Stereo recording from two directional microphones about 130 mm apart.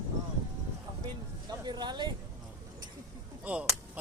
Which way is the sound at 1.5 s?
30° right (ahead or behind).